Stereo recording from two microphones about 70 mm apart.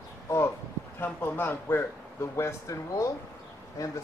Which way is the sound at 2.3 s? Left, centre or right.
Left.